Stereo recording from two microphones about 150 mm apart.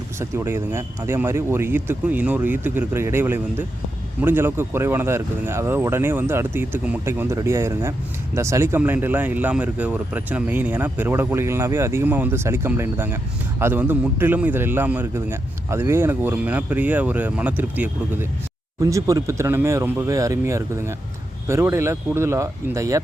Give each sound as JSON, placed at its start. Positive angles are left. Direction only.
{"t": 0.2, "sound": "speech", "side_deg": -15}